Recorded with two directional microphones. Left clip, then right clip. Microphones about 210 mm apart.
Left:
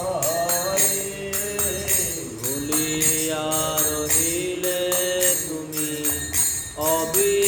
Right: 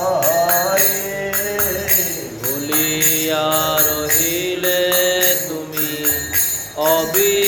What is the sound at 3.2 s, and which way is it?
Music, 15° left (ahead or behind).